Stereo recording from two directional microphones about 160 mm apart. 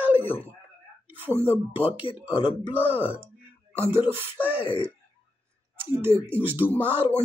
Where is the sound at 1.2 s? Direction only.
15° right (ahead or behind).